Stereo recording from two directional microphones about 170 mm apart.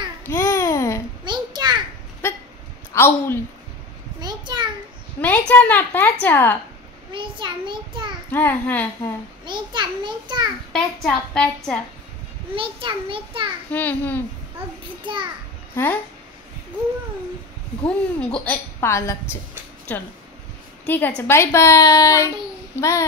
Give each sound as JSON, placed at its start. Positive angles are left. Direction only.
{"t": 0.3, "sound": "babbling", "side_deg": 15}
{"t": 1.2, "sound": "a sound", "side_deg": -25}
{"t": 2.9, "sound": "a woman's voice", "side_deg": 15}
{"t": 4.2, "sound": "a sound", "side_deg": -25}
{"t": 5.2, "sound": "a woman's voice", "side_deg": 10}
{"t": 7.1, "sound": "a child's voice", "side_deg": -30}
{"t": 8.3, "sound": "a woman's voice", "side_deg": 10}
{"t": 9.5, "sound": "a child's voice", "side_deg": -25}
{"t": 10.7, "sound": "a woman's voice", "side_deg": 5}
{"t": 12.5, "sound": "a child's voice", "side_deg": -30}
{"t": 13.7, "sound": "a woman's voice", "side_deg": 10}
{"t": 15.7, "sound": "speech", "side_deg": 10}
{"t": 17.8, "sound": "a woman's voice", "side_deg": 5}
{"t": 20.8, "sound": "a woman's voice", "side_deg": 10}